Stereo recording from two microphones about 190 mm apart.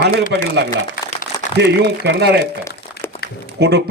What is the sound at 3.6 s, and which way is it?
Speech, 60° right (ahead or behind).